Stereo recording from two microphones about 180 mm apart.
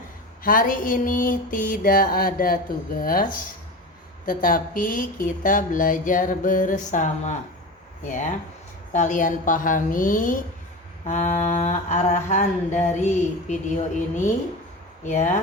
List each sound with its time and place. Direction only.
0.4 s speech: 50° left (ahead or behind)
4.3 s speech: 50° left (ahead or behind)
11.0 s mantra: 45° left (ahead or behind)
15.0 s speech: 40° left (ahead or behind)